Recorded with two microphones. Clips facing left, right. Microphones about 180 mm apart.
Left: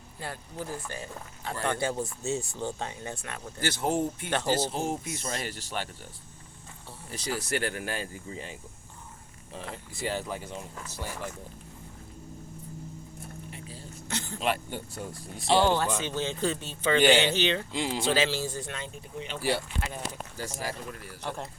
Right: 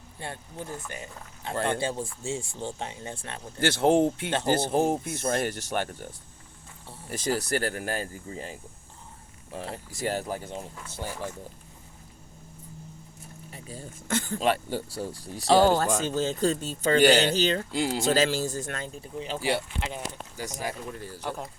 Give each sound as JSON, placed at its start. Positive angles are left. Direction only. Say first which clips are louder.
{"t": 0.2, "sound": "speech", "louder": "even", "side_deg": -25}
{"t": 3.6, "sound": "speech", "louder": "right 7 dB", "side_deg": -85}
{"t": 4.4, "sound": "speech", "louder": "right 6 dB", "side_deg": -55}
{"t": 7.1, "sound": "speech", "louder": "right 4 dB", "side_deg": -45}
{"t": 10.0, "sound": "speech", "louder": "right 3 dB", "side_deg": -45}
{"t": 13.5, "sound": "a sound", "louder": "right 2 dB", "side_deg": -45}
{"t": 14.3, "sound": "speech", "louder": "right 3 dB", "side_deg": -40}
{"t": 19.4, "sound": "speech", "louder": "right 1 dB", "side_deg": -60}
{"t": 19.8, "sound": "speech", "louder": "right 1 dB", "side_deg": -20}